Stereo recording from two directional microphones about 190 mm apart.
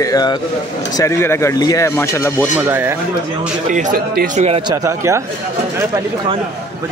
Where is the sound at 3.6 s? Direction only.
40° right (ahead or behind).